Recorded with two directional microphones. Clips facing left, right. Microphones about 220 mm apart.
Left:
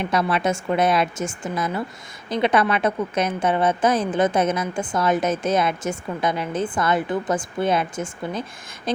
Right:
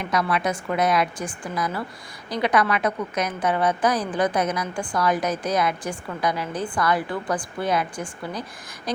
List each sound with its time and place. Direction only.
0.0 s a woman's voice: 25° left (ahead or behind)